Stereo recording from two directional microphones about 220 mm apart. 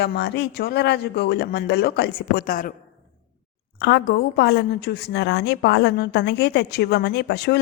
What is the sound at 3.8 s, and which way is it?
A woman's voice, 50° left (ahead or behind).